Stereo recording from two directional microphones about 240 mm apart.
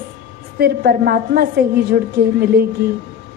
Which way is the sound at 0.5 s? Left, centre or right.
Right.